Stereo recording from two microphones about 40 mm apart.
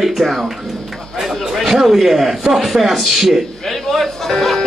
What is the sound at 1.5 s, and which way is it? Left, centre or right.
A man's voice, centre.